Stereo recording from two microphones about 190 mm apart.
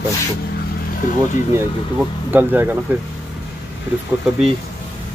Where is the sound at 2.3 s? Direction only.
10° right (ahead or behind).